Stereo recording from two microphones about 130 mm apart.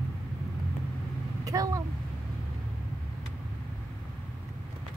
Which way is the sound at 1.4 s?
25° right (ahead or behind).